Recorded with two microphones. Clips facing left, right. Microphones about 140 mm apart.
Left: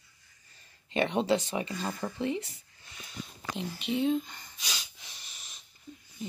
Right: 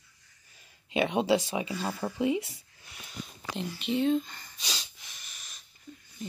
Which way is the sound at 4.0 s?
15° left (ahead or behind).